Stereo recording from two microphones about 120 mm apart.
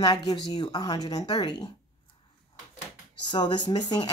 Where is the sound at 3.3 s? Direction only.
40° left (ahead or behind).